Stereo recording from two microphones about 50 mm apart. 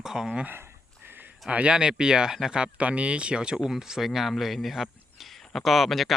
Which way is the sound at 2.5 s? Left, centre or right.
Right.